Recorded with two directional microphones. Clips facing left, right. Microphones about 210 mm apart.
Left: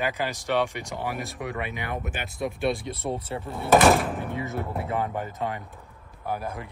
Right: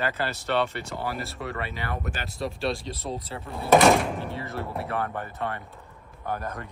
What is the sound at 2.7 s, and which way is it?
Speech, 55° left (ahead or behind).